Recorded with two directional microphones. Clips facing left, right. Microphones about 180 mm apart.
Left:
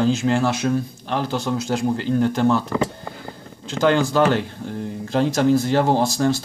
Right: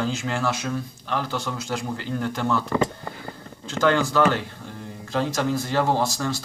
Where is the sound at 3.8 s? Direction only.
25° left (ahead or behind).